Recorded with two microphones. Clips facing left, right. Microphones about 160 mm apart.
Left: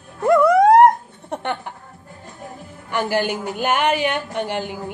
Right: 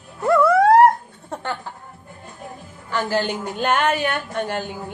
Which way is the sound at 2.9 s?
15° left (ahead or behind).